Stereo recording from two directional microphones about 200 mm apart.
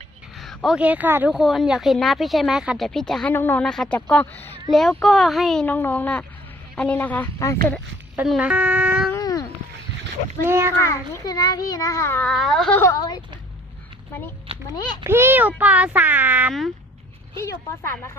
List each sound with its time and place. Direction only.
0.3 s a child's voice: centre (ahead or behind)
8.1 s a child's voice: 5° right (ahead or behind)
9.1 s cat: 15° left (ahead or behind)
10.4 s a child's voice: 10° right (ahead or behind)
10.8 s a child's voice: 15° left (ahead or behind)
12.8 s a woman's voice: 20° left (ahead or behind)
15.0 s a child's voice: 10° right (ahead or behind)
17.3 s a child's voice: 15° left (ahead or behind)